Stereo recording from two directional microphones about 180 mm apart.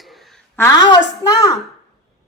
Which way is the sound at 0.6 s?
20° left (ahead or behind).